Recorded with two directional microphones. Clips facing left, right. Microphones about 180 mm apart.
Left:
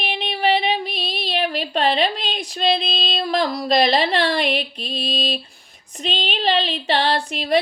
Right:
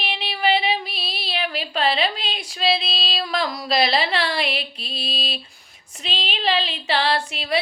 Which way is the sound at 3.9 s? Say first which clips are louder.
Left 4 dB; 40° left (ahead or behind).